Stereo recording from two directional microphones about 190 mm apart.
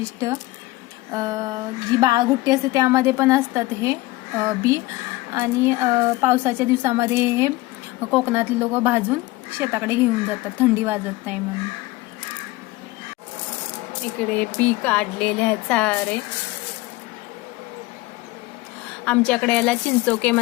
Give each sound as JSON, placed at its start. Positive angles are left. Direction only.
{"t": 1.1, "sound": "a woman's voice", "side_deg": -20}
{"t": 14.2, "sound": "speech", "side_deg": 10}
{"t": 19.0, "sound": "speech", "side_deg": 5}